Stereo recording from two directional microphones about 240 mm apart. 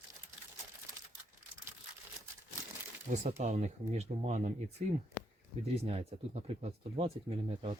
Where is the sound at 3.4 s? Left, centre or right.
Right.